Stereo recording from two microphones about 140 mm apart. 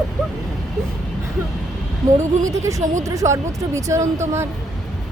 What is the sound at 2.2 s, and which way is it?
Speech, 20° right (ahead or behind).